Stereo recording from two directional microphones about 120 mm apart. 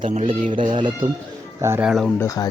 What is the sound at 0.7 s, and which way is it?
Speech, 40° right (ahead or behind).